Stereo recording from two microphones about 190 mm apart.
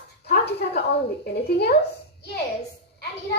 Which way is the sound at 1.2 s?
60° left (ahead or behind).